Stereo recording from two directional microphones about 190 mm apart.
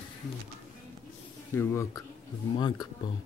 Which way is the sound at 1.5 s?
15° left (ahead or behind).